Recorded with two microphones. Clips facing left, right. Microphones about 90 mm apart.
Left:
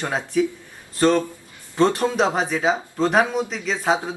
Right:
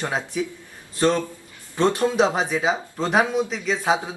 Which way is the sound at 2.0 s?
5° right (ahead or behind).